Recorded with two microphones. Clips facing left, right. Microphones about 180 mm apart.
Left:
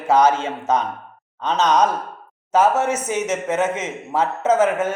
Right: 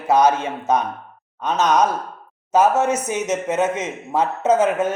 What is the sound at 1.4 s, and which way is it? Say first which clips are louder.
Speech: even; 10° right (ahead or behind).